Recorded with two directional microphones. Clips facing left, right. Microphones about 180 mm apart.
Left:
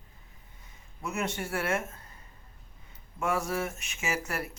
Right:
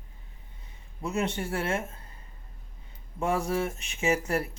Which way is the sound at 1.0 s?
30° right (ahead or behind).